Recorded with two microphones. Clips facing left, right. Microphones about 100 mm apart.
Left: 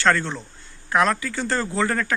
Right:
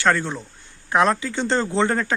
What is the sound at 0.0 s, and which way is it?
Speech, 15° right (ahead or behind).